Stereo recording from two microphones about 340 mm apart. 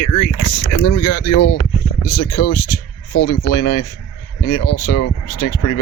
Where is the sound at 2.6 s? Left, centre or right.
Left.